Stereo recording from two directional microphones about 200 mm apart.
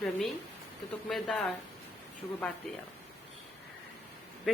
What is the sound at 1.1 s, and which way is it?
Speech, centre (ahead or behind).